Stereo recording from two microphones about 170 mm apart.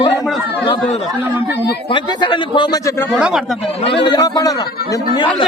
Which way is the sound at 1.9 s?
30° left (ahead or behind).